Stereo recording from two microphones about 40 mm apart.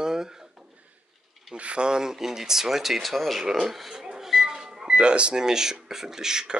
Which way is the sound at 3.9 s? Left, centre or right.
Centre.